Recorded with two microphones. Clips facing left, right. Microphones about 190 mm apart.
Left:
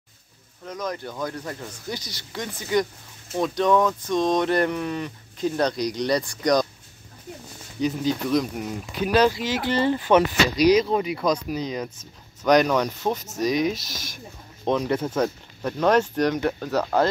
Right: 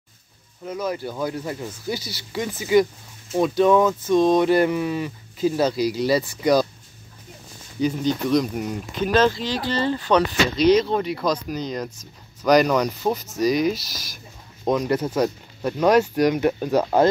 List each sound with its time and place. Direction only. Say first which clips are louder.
0.7 s speech: right 4 dB; 10° right (ahead or behind)
7.8 s speech: right 2 dB; 5° left (ahead or behind); by 10.2 s 20° left (ahead or behind)
10.7 s speech: right 3 dB; 5° left (ahead or behind)
12.4 s speech: right 2 dB; centre (ahead or behind); by 17.1 s 20° right (ahead or behind)